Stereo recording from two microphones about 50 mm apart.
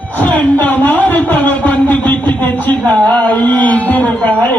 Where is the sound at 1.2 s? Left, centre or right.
Left.